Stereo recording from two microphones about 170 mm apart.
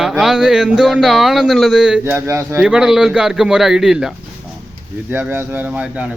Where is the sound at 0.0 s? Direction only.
Centre (ahead or behind).